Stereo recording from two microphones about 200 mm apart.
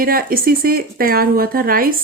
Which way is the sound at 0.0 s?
45° right (ahead or behind).